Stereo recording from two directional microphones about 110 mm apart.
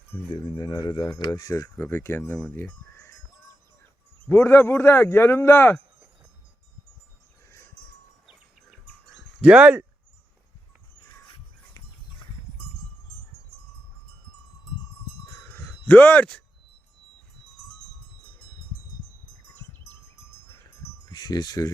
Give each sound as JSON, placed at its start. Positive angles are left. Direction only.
{"t": 0.1, "sound": "speech", "side_deg": 20}
{"t": 0.6, "sound": "speech", "side_deg": 40}
{"t": 4.3, "sound": "speech", "side_deg": 20}
{"t": 9.4, "sound": "speech", "side_deg": -10}
{"t": 11.8, "sound": "music", "side_deg": 30}
{"t": 15.3, "sound": "wind chime", "side_deg": 15}
{"t": 21.1, "sound": "speech", "side_deg": 35}